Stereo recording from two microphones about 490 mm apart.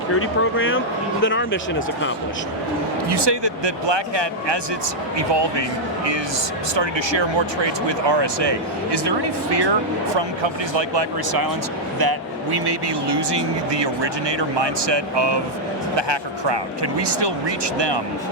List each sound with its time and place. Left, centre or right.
0.1 s speech: left
3.1 s speech: right
6.7 s speech: right